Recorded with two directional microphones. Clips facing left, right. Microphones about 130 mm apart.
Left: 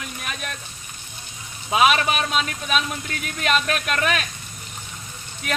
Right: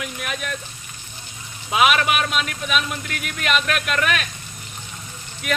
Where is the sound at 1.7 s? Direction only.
35° left (ahead or behind).